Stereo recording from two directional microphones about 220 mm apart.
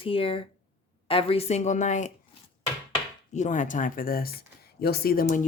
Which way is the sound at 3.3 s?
35° left (ahead or behind).